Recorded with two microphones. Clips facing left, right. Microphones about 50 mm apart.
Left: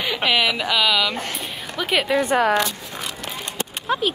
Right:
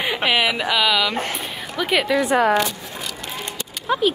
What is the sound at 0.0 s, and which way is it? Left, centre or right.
Speech, right.